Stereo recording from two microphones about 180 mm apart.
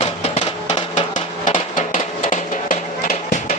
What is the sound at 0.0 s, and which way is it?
Music, 40° left (ahead or behind).